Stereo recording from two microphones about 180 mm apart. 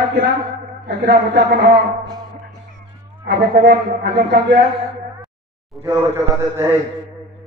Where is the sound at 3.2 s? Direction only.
65° right (ahead or behind).